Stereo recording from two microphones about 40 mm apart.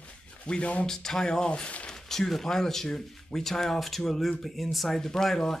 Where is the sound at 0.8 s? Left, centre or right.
Centre.